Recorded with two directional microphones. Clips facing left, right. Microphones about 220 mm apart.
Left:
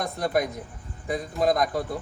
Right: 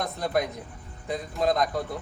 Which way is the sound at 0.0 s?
Centre (ahead or behind).